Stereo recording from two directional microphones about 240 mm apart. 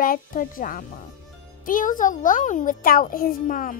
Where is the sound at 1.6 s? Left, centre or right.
Left.